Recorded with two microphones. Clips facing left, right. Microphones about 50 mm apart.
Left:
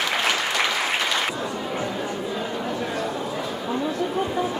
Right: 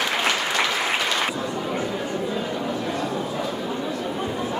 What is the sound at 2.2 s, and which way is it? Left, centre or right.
Chatter, centre.